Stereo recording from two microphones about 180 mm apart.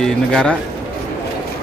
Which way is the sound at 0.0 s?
5° left (ahead or behind).